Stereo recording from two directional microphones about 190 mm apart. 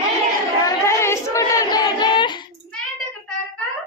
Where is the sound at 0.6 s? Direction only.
15° left (ahead or behind).